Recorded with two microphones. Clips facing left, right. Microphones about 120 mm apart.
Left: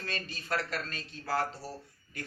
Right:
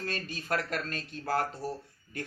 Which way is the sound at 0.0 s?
50° right (ahead or behind).